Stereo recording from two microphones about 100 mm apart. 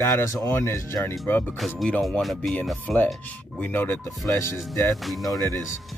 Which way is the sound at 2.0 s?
Centre (ahead or behind).